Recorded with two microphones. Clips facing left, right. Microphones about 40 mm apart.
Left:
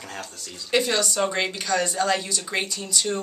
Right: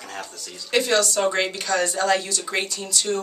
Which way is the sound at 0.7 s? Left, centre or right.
Centre.